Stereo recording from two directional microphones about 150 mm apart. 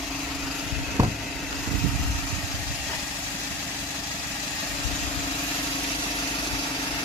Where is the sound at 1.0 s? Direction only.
20° right (ahead or behind).